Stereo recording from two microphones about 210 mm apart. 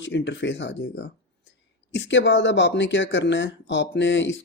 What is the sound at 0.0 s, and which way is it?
Speech, 60° left (ahead or behind).